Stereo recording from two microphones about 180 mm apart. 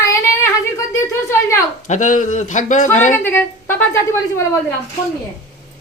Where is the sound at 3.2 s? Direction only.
10° left (ahead or behind).